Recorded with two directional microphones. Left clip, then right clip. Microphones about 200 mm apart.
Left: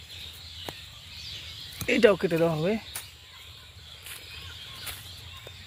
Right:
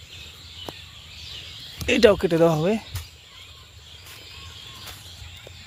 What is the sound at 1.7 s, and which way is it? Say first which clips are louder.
Speech: right 4 dB; 10° right (ahead or behind).